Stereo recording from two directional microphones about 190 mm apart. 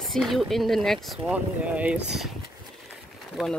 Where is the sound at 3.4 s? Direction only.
5° right (ahead or behind).